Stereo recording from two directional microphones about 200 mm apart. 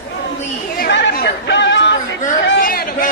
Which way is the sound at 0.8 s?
60° left (ahead or behind).